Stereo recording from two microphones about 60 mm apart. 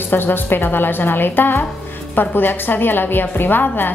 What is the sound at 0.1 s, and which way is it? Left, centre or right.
A woman's voice, left.